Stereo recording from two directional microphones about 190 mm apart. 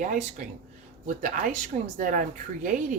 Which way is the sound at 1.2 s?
45° right (ahead or behind).